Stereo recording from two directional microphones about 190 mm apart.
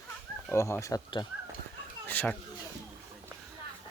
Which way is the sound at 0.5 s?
15° left (ahead or behind).